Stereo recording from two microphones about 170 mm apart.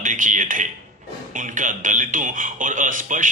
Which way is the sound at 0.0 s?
50° right (ahead or behind).